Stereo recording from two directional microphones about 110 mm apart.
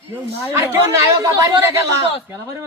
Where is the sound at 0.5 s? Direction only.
25° right (ahead or behind).